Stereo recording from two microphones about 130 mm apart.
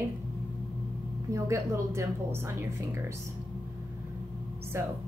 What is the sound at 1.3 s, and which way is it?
Speech, 25° right (ahead or behind).